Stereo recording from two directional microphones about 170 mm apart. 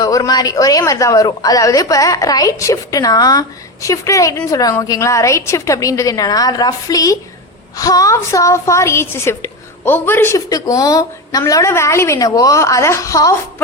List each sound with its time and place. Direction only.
0.0 s a woman's voice: 20° left (ahead or behind)